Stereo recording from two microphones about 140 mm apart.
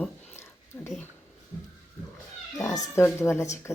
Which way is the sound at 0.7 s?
20° left (ahead or behind).